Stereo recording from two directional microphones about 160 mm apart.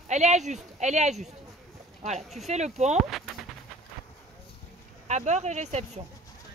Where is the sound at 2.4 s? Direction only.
45° right (ahead or behind).